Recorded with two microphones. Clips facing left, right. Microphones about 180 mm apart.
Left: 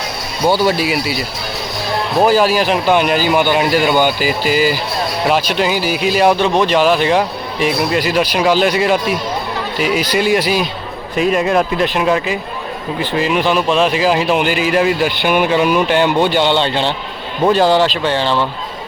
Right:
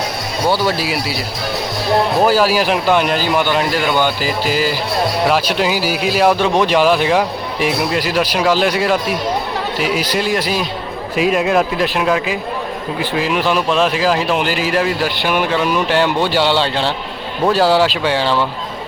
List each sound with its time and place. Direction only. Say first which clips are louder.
0.4 s speech: left 3 dB; 25° left (ahead or behind)
0.9 s speech: left 3 dB; centre (ahead or behind)
2.2 s speech: left 5 dB; 5° right (ahead or behind)